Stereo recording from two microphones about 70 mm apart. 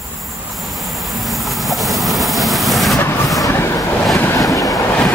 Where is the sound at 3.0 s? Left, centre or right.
Left.